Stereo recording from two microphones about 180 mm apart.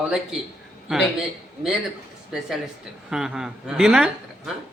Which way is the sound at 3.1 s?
5° right (ahead or behind).